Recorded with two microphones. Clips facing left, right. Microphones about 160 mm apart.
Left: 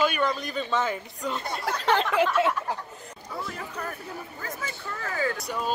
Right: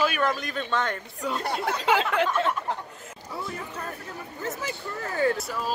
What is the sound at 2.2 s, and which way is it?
Speech, 10° left (ahead or behind).